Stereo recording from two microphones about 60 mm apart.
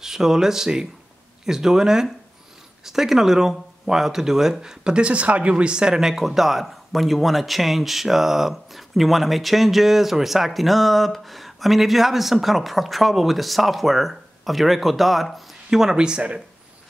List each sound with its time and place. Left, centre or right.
0.0 s speech: centre